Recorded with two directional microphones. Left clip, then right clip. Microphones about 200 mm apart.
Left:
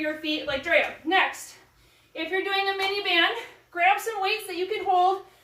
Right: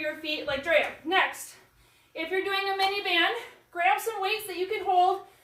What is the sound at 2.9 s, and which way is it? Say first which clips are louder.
A woman's voice: left 2 dB; centre (ahead or behind).